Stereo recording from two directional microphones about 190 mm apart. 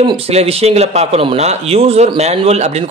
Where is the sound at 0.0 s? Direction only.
30° right (ahead or behind).